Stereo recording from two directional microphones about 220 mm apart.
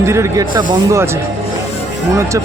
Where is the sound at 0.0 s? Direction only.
15° right (ahead or behind).